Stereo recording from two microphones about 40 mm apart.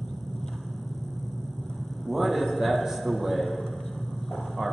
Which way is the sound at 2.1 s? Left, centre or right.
Centre.